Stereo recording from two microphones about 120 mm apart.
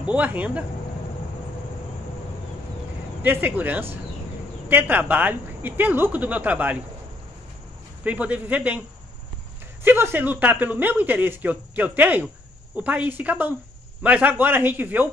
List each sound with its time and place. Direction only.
0.0 s speech: 10° right (ahead or behind)
3.2 s speech: 15° right (ahead or behind)
8.0 s speech: 10° right (ahead or behind)
9.8 s speech: 20° right (ahead or behind)